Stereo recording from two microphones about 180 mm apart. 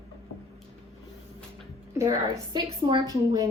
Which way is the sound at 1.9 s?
20° right (ahead or behind).